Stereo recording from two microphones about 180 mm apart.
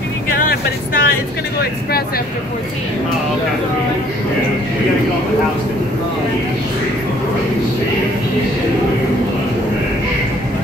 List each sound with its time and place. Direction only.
0.5 s speech: 55° left (ahead or behind)